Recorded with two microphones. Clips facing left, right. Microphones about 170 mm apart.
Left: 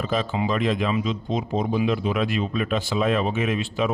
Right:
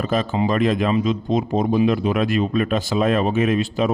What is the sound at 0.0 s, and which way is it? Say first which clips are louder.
A man's voice: right 4 dB; 50° right (ahead or behind).